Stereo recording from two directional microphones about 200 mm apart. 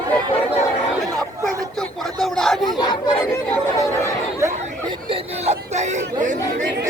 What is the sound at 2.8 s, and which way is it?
Chatter, 20° left (ahead or behind).